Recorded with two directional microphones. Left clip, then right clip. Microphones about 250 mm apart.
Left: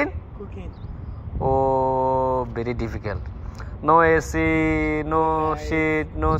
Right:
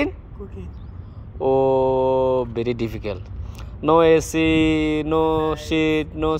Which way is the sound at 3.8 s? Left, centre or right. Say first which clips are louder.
Right 1 dB; right.